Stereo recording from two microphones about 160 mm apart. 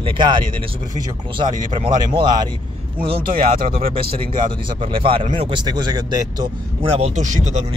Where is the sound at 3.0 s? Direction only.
70° right (ahead or behind).